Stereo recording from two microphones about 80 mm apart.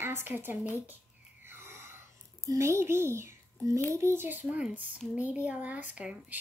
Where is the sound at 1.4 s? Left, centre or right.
Right.